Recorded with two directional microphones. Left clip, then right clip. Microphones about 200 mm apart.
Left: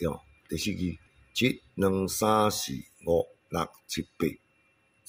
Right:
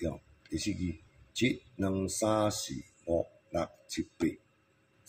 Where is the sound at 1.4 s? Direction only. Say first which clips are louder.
Left 5 dB; 55° left (ahead or behind).